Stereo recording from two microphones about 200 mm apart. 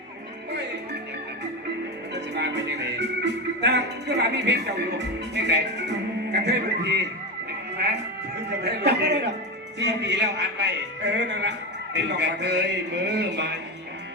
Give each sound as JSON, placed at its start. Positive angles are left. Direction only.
{"t": 2.1, "sound": "music", "side_deg": -60}
{"t": 8.4, "sound": "music", "side_deg": -55}